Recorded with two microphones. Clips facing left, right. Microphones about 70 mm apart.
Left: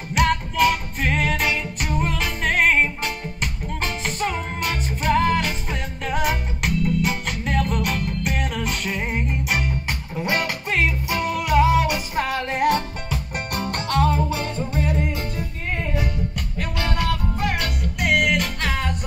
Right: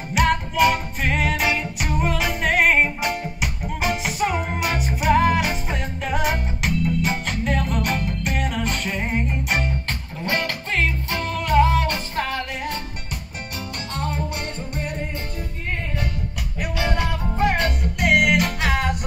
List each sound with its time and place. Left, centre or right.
0.1 s music: centre
9.8 s music: centre
16.5 s music: centre
17.0 s music: right
17.9 s music: centre